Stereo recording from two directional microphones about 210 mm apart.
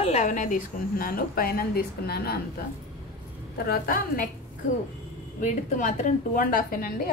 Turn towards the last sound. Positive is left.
turn(degrees=45)  # may be behind; listen again after turning